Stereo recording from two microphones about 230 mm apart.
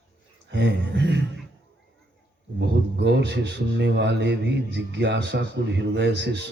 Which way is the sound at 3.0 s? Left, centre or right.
Right.